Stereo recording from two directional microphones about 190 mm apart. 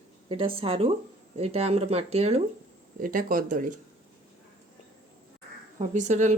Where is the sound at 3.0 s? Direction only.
45° right (ahead or behind).